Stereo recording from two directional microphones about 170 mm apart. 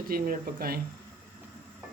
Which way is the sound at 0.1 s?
60° right (ahead or behind).